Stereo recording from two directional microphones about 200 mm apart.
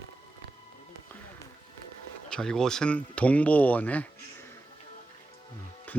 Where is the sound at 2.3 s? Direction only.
5° left (ahead or behind).